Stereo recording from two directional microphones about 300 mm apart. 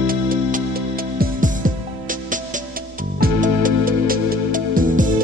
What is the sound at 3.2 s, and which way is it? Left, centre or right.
Music, right.